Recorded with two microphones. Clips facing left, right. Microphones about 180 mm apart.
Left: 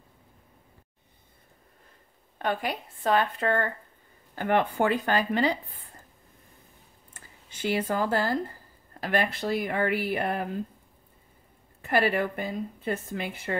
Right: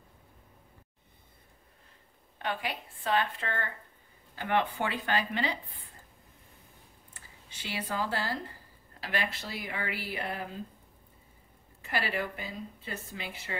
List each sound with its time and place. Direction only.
2.3 s a woman's voice: 45° left (ahead or behind)
7.2 s a woman's voice: 45° left (ahead or behind)
11.8 s a woman's voice: 50° left (ahead or behind)